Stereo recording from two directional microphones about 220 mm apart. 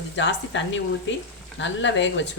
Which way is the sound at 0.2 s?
55° left (ahead or behind).